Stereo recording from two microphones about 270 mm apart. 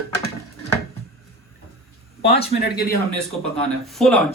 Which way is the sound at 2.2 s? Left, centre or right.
Left.